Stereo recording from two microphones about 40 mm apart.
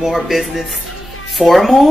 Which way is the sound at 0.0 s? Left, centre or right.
Centre.